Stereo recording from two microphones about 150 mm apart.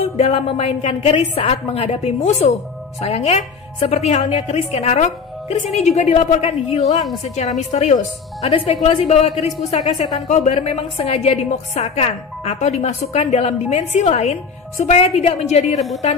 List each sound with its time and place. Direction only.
0.2 s a woman's voice: 45° left (ahead or behind)